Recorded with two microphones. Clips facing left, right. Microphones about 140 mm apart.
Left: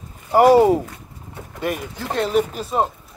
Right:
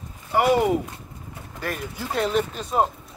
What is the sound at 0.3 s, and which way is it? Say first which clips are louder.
Speech: left 7 dB; 40° left (ahead or behind).